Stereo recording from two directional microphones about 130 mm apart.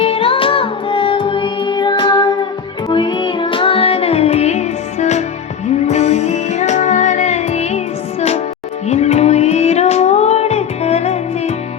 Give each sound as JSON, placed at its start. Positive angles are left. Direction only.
{"t": 0.0, "sound": "music", "side_deg": 45}
{"t": 8.9, "sound": "music", "side_deg": 55}